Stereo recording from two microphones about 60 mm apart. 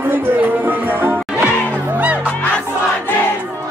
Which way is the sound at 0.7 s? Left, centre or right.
Right.